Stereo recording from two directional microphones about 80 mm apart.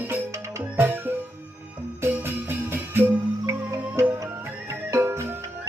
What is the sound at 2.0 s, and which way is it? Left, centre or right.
Music, right.